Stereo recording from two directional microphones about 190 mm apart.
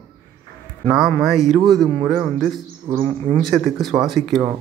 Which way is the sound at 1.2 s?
Centre (ahead or behind).